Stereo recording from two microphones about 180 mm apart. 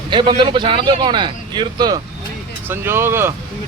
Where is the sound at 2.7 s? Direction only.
15° right (ahead or behind).